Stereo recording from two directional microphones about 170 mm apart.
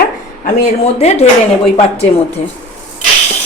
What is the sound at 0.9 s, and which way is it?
Speech, 40° left (ahead or behind).